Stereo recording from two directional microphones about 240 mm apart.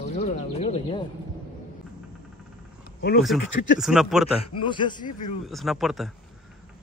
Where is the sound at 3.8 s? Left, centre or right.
Centre.